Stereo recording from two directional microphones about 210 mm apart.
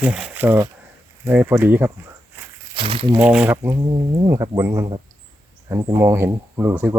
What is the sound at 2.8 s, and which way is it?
Speech, 25° right (ahead or behind).